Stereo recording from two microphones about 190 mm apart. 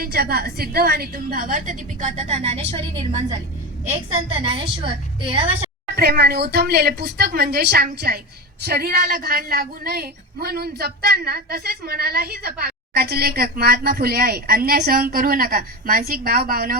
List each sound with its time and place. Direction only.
0.0 s a woman's voice: 55° right (ahead or behind); by 5.6 s 30° right (ahead or behind)
6.0 s a woman's voice: 55° right (ahead or behind)